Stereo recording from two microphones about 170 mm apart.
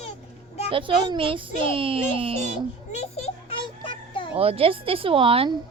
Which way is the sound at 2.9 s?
40° left (ahead or behind).